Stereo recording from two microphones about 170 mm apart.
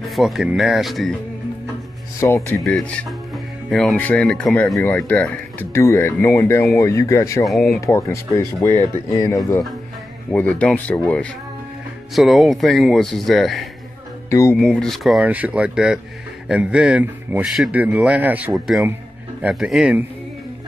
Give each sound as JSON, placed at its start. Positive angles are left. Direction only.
{"t": 0.1, "sound": "speech", "side_deg": 0}
{"t": 2.1, "sound": "speech", "side_deg": 15}
{"t": 2.6, "sound": "speech", "side_deg": 5}
{"t": 7.4, "sound": "speech", "side_deg": 0}
{"t": 7.8, "sound": "speech", "side_deg": 20}
{"t": 14.3, "sound": "speech", "side_deg": 15}
{"t": 14.6, "sound": "speech", "side_deg": 5}